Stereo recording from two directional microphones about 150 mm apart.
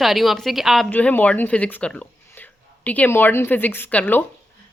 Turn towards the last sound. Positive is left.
turn(degrees=10)  # may be behind; listen again after turning